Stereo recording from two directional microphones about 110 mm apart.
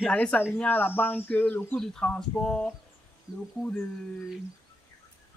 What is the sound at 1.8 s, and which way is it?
Speech, 5° left (ahead or behind).